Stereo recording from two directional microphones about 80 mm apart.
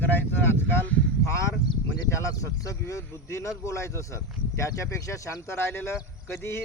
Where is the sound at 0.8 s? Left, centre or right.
Centre.